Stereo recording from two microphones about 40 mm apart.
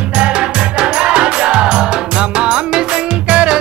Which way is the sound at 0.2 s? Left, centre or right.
Right.